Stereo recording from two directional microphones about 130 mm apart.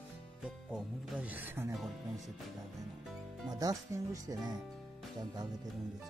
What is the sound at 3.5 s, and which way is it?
Speech, 30° right (ahead or behind).